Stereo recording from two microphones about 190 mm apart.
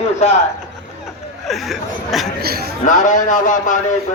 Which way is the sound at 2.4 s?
55° right (ahead or behind).